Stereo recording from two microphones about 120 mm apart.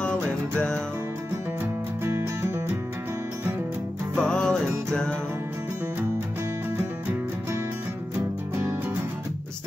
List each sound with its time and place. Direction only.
2.0 s music: 20° right (ahead or behind)
4.2 s music: 5° left (ahead or behind)